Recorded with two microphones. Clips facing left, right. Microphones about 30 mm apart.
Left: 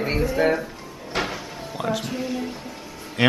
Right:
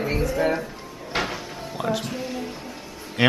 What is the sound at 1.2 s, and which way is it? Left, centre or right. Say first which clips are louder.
Cupboard open or close: even; centre.